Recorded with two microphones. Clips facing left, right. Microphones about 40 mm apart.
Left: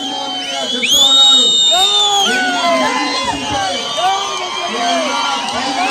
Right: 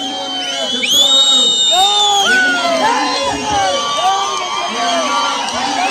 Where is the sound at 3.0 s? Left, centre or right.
Left.